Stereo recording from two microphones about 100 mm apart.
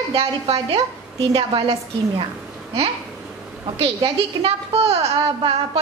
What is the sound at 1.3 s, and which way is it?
Speech, 60° right (ahead or behind).